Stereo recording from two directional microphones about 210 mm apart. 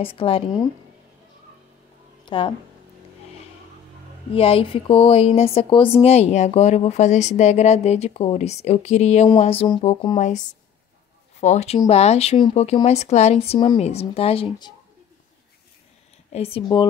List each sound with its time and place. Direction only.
0.0 s speech: 25° left (ahead or behind)
2.2 s speech: 25° left (ahead or behind)
4.3 s speech: 25° left (ahead or behind)
16.3 s speech: 30° left (ahead or behind)